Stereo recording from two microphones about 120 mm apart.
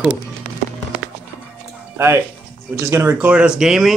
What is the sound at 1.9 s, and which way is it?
Speech, 20° right (ahead or behind).